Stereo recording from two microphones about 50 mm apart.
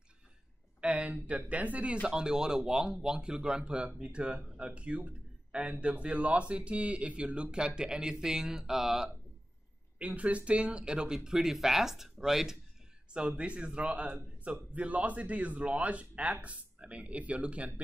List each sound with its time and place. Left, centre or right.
0.7 s speech: right
2.0 s speech: centre
9.9 s speech: right; by 12.5 s centre
13.4 s speech: right